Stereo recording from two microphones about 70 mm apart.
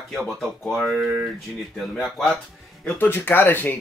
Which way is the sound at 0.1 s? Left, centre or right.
Centre.